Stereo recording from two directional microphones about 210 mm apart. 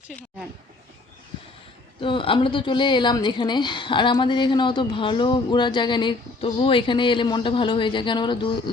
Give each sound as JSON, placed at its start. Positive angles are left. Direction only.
{"t": 0.1, "sound": "speech", "side_deg": 0}
{"t": 2.0, "sound": "a woman's voice", "side_deg": 25}